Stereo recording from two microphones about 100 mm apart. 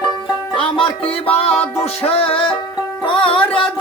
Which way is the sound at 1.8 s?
90° left.